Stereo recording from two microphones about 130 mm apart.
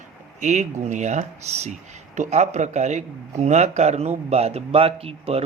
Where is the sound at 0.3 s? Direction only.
65° right (ahead or behind).